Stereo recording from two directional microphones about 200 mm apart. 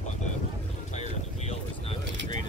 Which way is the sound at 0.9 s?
35° left (ahead or behind).